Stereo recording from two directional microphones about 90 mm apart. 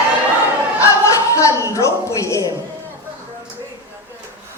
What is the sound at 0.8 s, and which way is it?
Music, 35° left (ahead or behind).